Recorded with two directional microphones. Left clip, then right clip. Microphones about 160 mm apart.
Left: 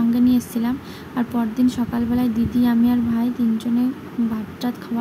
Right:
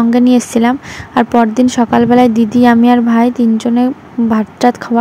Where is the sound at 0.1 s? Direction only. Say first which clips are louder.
Right 9 dB; 55° right (ahead or behind).